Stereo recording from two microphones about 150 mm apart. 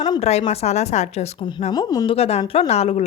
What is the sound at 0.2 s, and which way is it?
Speech, 45° left (ahead or behind).